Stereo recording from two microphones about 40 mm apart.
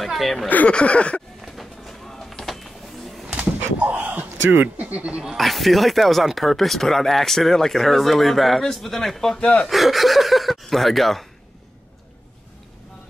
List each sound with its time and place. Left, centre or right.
0.0 s speech: centre
0.7 s a sound: left
1.4 s a sound: centre
4.0 s speech: right
5.4 s speech: centre
9.3 s speech: centre
9.7 s speech: centre